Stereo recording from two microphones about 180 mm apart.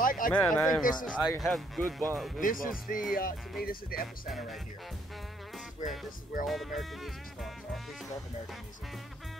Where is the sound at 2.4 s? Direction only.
50° left (ahead or behind).